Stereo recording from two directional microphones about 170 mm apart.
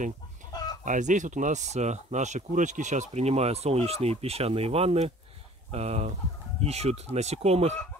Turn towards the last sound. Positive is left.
turn(degrees=-40)  # may be behind; listen again after turning